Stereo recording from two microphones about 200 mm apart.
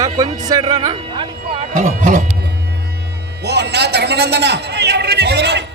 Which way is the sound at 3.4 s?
55° right (ahead or behind).